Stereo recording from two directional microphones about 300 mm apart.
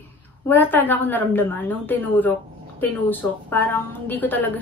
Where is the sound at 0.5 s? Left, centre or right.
Centre.